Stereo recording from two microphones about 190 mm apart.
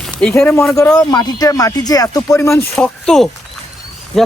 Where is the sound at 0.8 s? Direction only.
20° left (ahead or behind).